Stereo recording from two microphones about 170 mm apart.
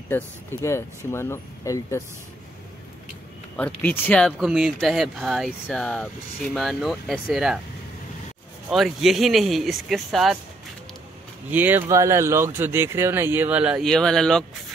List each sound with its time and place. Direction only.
0.1 s speech: 15° left (ahead or behind)
3.5 s speech: 10° left (ahead or behind)
8.6 s speech: 5° right (ahead or behind)
11.5 s speech: 10° right (ahead or behind)